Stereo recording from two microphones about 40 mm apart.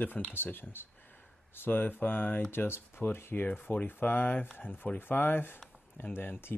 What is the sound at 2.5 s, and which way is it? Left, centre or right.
Speech, left.